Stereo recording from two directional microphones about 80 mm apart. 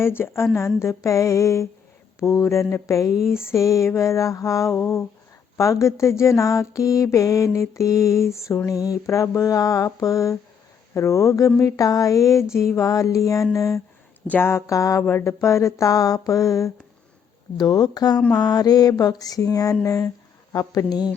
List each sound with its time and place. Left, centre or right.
0.0 s mantra: left
14.3 s mantra: left
17.6 s speech: left
18.3 s mantra: left